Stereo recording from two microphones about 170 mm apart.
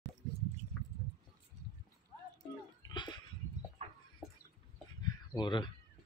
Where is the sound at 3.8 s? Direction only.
35° right (ahead or behind).